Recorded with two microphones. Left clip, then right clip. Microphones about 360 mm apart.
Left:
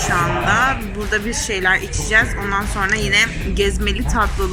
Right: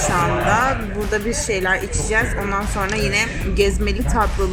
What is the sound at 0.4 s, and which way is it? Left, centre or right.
Speech, centre.